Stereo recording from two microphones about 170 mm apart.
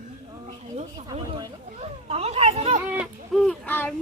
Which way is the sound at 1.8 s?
35° right (ahead or behind).